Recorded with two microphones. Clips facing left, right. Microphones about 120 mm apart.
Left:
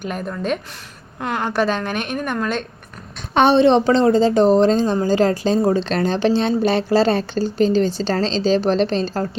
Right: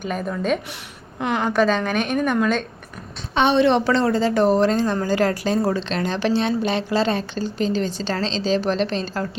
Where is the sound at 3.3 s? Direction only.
45° left (ahead or behind).